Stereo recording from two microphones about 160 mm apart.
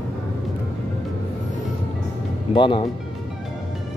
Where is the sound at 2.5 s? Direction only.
30° left (ahead or behind).